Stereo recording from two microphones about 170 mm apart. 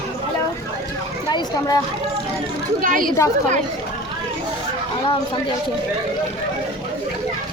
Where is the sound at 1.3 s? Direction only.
25° left (ahead or behind).